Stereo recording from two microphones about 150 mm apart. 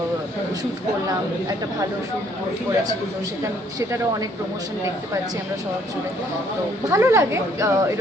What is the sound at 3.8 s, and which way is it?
Speech, 20° right (ahead or behind).